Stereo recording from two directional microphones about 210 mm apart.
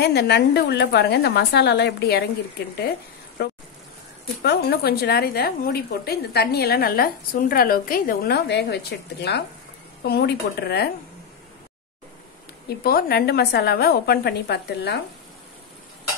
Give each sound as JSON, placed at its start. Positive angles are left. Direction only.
{"t": 0.0, "sound": "a woman's voice", "side_deg": 50}
{"t": 3.4, "sound": "a woman's voice", "side_deg": 50}
{"t": 12.6, "sound": "a woman's voice", "side_deg": 45}